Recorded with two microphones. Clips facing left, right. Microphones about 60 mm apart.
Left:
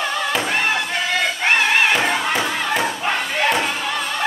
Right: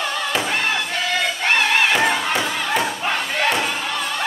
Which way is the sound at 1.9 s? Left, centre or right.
Centre.